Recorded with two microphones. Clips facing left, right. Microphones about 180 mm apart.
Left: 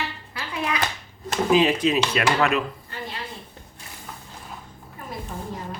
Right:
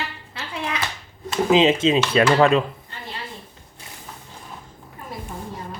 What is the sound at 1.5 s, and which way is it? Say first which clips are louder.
Speech: right 3 dB; 20° right (ahead or behind).